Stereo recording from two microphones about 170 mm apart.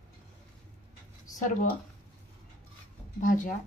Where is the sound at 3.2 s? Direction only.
50° left (ahead or behind).